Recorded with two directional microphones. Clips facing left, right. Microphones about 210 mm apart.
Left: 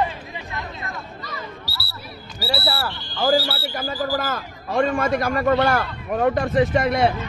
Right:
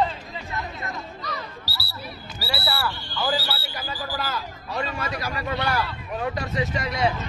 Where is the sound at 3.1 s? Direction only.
45° left (ahead or behind).